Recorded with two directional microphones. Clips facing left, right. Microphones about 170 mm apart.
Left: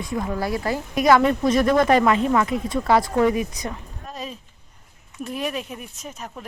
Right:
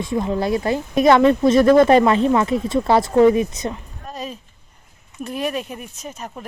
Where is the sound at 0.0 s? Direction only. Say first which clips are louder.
Right 5 dB; 25° right (ahead or behind).